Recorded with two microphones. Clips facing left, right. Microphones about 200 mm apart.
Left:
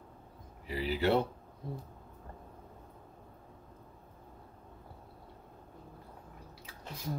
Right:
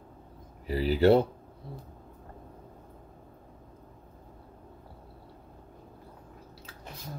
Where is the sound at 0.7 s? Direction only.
40° right (ahead or behind).